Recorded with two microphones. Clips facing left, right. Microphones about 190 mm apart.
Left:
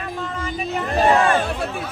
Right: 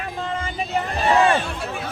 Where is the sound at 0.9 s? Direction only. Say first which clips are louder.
Left 2 dB; 45° left (ahead or behind).